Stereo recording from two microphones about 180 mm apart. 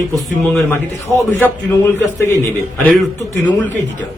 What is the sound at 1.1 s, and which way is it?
Speech, 10° left (ahead or behind).